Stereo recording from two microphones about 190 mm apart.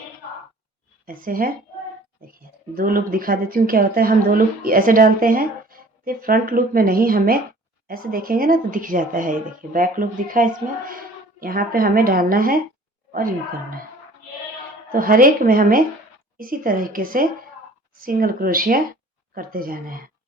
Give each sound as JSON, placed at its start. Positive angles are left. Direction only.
{"t": 1.0, "sound": "speech", "side_deg": -50}
{"t": 14.9, "sound": "speech", "side_deg": -50}